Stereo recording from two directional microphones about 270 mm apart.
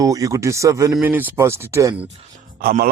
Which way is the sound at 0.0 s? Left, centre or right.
Centre.